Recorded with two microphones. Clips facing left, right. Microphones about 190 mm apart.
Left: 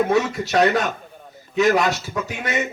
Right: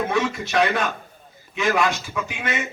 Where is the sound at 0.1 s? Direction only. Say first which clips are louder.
Left 3 dB; 40° left (ahead or behind).